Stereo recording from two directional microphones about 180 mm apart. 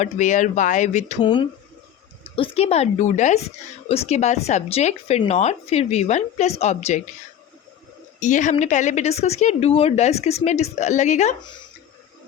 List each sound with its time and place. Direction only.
0.0 s speech: 40° left (ahead or behind)
1.2 s a woman's voice: 25° left (ahead or behind)
8.2 s a woman's voice: 40° left (ahead or behind)